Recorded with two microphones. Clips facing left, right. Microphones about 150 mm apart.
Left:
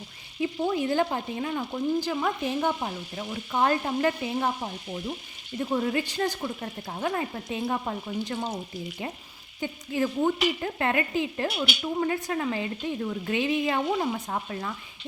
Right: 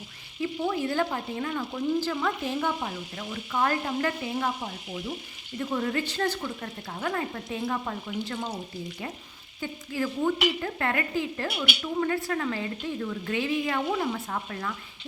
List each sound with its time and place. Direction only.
0.6 s frying: 15° left (ahead or behind)
9.6 s frying: 20° left (ahead or behind)